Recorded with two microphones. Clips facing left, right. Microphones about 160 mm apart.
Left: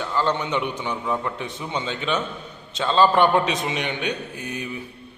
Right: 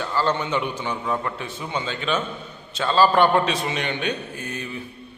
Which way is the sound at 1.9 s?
20° left (ahead or behind).